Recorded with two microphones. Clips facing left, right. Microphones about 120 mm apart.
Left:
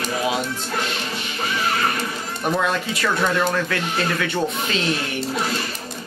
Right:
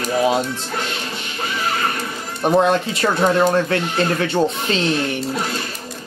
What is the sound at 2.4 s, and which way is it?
Speech, 30° right (ahead or behind).